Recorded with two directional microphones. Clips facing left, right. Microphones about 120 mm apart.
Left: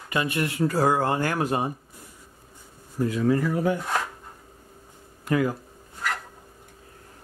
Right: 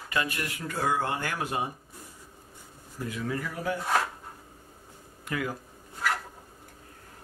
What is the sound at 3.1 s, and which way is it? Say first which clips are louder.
Speech: left 10 dB; 35° left (ahead or behind).